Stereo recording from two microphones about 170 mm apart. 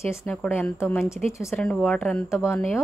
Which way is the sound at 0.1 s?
10° left (ahead or behind).